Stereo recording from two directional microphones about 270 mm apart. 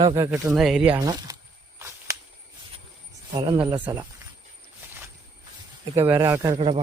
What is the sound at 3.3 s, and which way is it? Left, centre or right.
Speech, centre.